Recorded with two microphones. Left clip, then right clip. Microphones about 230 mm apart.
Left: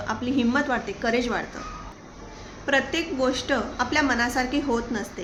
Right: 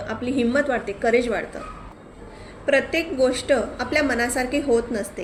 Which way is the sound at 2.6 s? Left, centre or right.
Left.